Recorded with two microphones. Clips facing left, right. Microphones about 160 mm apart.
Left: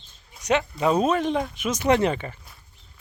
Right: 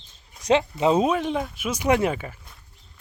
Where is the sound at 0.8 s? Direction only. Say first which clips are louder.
Even; 20° right (ahead or behind).